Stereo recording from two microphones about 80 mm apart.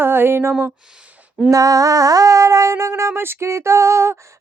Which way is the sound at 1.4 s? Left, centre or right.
Right.